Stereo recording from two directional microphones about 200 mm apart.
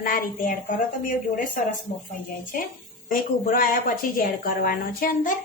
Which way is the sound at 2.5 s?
45° left (ahead or behind).